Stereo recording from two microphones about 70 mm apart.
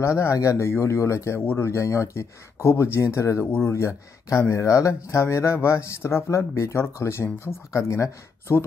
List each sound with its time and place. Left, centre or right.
0.0 s speech: left